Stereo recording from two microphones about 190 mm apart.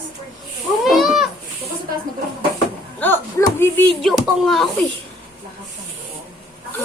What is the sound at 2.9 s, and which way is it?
Speech, 10° left (ahead or behind).